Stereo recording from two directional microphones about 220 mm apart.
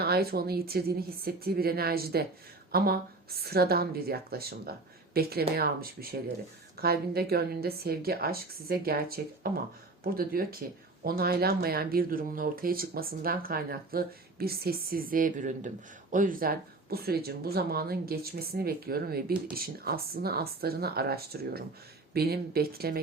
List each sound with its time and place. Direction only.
0.0 s speech: 45° right (ahead or behind)